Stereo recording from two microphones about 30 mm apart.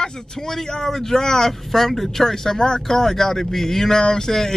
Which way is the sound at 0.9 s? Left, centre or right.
Centre.